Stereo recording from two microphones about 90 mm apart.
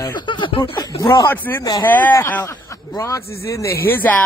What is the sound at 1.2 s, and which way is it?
Speech, 20° left (ahead or behind).